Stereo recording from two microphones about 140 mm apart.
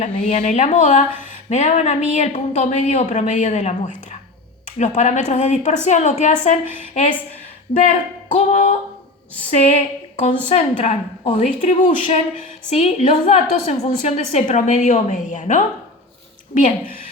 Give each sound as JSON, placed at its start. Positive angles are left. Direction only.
{"t": 0.0, "sound": "speech", "side_deg": 55}
{"t": 9.5, "sound": "speech", "side_deg": 55}
{"t": 12.7, "sound": "speech", "side_deg": 55}
{"t": 16.6, "sound": "speech", "side_deg": 70}